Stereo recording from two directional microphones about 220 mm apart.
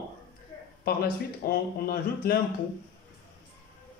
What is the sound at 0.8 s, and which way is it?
Speech, 45° left (ahead or behind).